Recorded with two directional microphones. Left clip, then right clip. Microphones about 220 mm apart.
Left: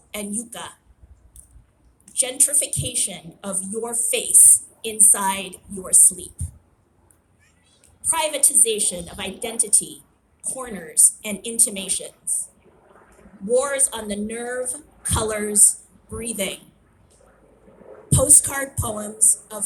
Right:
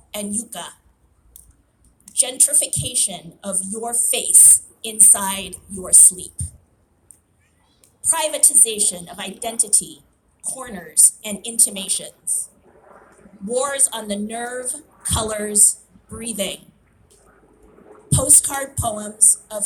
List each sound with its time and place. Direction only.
0.1 s a woman's voice: 30° right (ahead or behind)
2.1 s a woman's voice: 30° right (ahead or behind)
8.0 s a woman's voice: 30° right (ahead or behind)
18.1 s music: 30° right (ahead or behind)